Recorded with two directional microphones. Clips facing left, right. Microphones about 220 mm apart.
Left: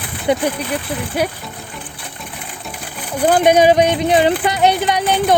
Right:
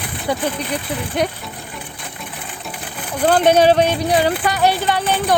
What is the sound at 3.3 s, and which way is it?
Speech, 10° left (ahead or behind).